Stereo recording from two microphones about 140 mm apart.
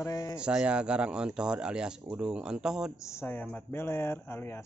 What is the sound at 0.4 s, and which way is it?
Speech, 5° right (ahead or behind).